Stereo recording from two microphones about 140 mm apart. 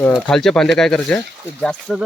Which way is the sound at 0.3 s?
5° left (ahead or behind).